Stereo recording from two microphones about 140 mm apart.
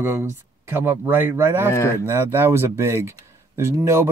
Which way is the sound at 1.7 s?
20° left (ahead or behind).